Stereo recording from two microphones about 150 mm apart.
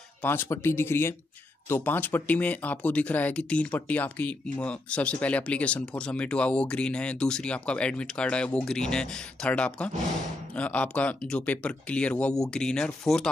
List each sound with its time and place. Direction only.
0.2 s speech: 15° left (ahead or behind)